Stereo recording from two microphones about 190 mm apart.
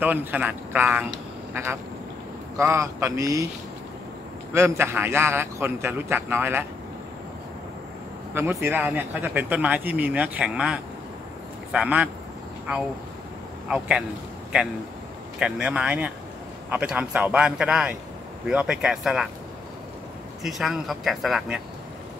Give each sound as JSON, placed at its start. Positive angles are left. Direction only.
{"t": 0.0, "sound": "speech", "side_deg": -10}
{"t": 4.6, "sound": "speech", "side_deg": -15}
{"t": 8.4, "sound": "speech", "side_deg": -10}
{"t": 13.7, "sound": "speech", "side_deg": -5}
{"t": 15.3, "sound": "speech", "side_deg": -5}
{"t": 20.4, "sound": "speech", "side_deg": 0}